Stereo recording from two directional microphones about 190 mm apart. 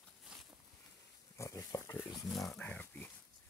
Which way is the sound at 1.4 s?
15° left (ahead or behind).